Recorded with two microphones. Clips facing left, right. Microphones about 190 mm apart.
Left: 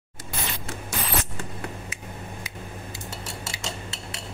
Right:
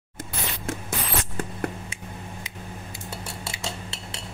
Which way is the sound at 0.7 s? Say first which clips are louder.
Right 4 dB; 50° right (ahead or behind).